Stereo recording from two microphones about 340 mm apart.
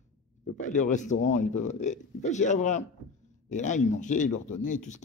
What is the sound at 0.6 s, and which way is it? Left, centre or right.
Speech, left.